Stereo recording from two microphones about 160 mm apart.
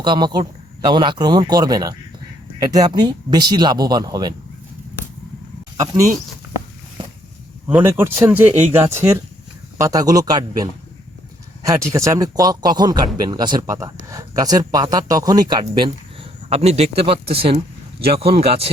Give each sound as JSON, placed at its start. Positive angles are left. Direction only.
{"t": 0.0, "sound": "speech", "side_deg": -30}
{"t": 5.8, "sound": "speech", "side_deg": -20}
{"t": 7.7, "sound": "speech", "side_deg": -15}
{"t": 11.6, "sound": "speech", "side_deg": -20}